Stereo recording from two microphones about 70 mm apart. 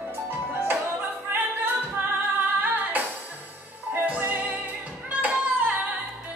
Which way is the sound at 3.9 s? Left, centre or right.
Right.